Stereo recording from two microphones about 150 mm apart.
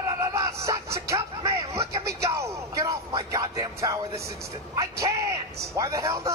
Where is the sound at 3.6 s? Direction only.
20° right (ahead or behind).